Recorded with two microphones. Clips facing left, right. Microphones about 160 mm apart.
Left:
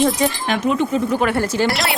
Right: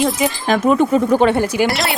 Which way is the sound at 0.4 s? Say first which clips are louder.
Right 5 dB; 45° right (ahead or behind).